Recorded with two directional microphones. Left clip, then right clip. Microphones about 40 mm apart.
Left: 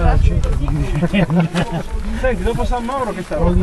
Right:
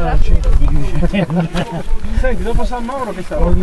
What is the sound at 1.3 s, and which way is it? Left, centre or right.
Speech, left.